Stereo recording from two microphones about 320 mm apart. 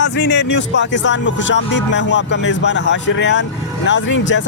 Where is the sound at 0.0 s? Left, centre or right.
Left.